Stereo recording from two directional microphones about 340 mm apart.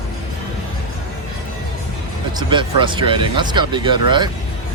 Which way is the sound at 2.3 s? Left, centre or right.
Centre.